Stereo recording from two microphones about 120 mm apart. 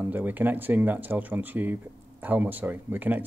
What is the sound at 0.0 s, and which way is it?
Speech, 15° right (ahead or behind).